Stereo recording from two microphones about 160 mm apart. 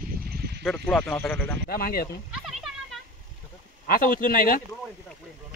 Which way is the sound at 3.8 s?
65° left (ahead or behind).